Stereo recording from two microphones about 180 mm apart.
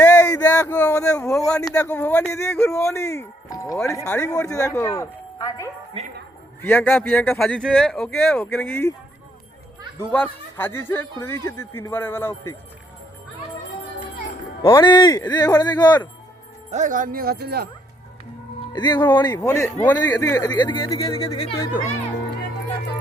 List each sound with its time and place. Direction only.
0.0 s a sound: 15° left (ahead or behind)
0.7 s a man's voice: 10° left (ahead or behind)
10.0 s a man's voice: 10° left (ahead or behind)
14.7 s a man's voice: 25° left (ahead or behind)
16.7 s speech: 45° right (ahead or behind); by 17.7 s 60° right (ahead or behind)
18.7 s a man's voice: 25° left (ahead or behind)